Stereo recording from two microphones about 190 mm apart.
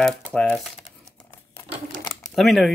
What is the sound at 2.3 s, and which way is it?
Speech, centre (ahead or behind).